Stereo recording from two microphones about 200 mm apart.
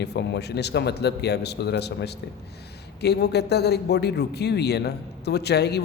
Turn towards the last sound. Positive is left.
turn(degrees=55)  # may be behind; listen again after turning